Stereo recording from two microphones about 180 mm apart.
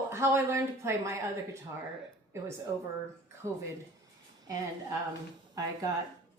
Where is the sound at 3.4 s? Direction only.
15° right (ahead or behind).